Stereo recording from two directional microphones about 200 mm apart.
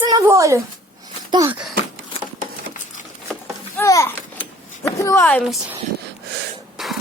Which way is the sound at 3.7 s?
15° left (ahead or behind).